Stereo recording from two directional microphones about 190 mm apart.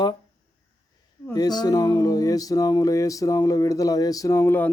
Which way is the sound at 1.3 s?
20° left (ahead or behind).